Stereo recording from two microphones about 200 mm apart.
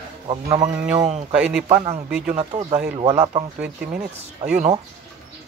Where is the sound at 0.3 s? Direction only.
20° right (ahead or behind).